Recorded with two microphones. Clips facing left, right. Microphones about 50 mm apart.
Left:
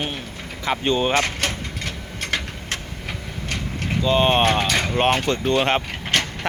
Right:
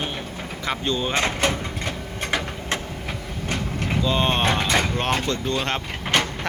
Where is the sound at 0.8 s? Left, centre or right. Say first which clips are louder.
Left 6 dB; left.